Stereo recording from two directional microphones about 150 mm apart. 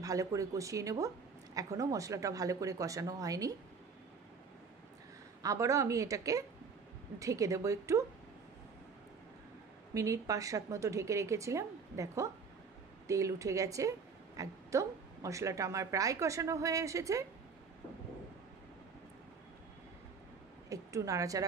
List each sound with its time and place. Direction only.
0.0 s a woman's voice: 20° right (ahead or behind)
5.4 s a woman's voice: 20° right (ahead or behind)
9.9 s a woman's voice: 20° right (ahead or behind)
20.7 s a woman's voice: 20° right (ahead or behind)